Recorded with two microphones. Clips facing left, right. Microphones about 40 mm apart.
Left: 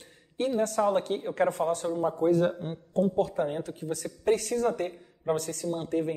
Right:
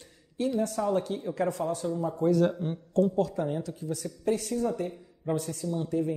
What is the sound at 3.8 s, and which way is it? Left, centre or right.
A man's voice, left.